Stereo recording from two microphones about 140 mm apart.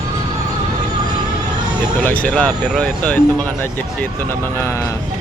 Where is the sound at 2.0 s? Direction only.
10° left (ahead or behind).